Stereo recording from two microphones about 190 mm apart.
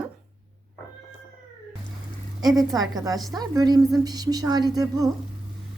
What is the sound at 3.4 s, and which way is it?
A woman's voice, 20° right (ahead or behind).